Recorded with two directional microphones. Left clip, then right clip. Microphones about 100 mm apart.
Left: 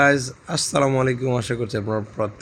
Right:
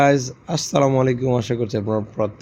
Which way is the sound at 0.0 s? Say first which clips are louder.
Right 1 dB; 25° right (ahead or behind).